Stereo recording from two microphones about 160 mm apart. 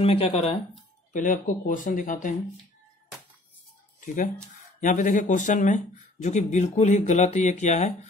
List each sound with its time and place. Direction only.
0.0 s speech: 40° left (ahead or behind)
1.1 s speech: 55° left (ahead or behind)
4.0 s speech: 55° left (ahead or behind)